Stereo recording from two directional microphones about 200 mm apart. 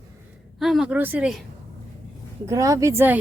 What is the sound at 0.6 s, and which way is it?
Speech, centre (ahead or behind).